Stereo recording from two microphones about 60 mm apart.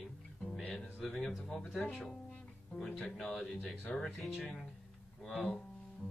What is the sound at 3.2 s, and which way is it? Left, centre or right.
Speech, centre.